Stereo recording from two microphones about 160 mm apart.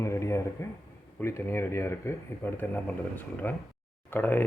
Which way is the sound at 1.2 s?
15° left (ahead or behind).